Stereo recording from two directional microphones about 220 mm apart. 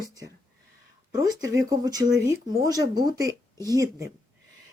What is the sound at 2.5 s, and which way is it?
Speech, 15° right (ahead or behind).